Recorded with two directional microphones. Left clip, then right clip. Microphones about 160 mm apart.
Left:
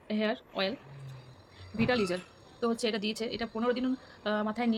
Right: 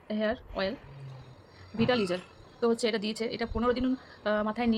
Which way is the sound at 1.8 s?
10° right (ahead or behind).